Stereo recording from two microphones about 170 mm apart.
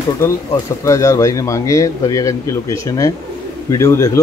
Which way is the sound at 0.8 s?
20° left (ahead or behind).